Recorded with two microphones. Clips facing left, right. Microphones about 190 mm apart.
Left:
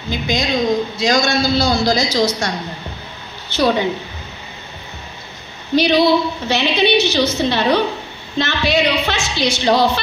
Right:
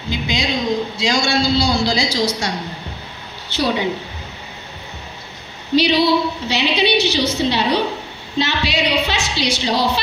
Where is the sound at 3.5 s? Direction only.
50° left (ahead or behind).